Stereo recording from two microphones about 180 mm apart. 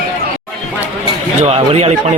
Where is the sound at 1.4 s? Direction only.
35° right (ahead or behind).